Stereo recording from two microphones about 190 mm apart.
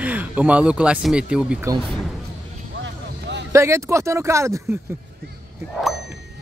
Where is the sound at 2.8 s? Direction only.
70° right (ahead or behind).